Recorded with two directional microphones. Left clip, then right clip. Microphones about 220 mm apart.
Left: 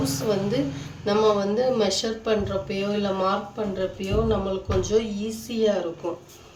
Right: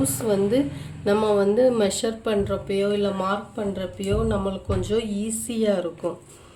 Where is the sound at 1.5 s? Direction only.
45° right (ahead or behind).